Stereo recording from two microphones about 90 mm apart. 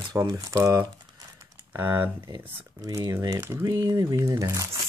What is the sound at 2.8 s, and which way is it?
Speech, 40° right (ahead or behind).